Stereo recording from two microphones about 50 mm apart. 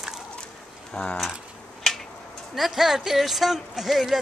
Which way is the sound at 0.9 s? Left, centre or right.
Left.